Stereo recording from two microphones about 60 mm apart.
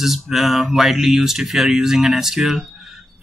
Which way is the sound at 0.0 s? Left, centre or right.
Centre.